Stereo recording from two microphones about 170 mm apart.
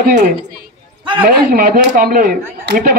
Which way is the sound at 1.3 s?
60° right (ahead or behind).